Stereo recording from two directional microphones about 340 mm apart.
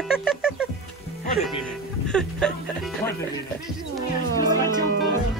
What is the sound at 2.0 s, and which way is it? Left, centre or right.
Music, centre.